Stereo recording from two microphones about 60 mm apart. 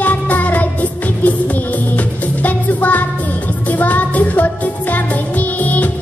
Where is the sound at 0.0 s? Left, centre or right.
Left.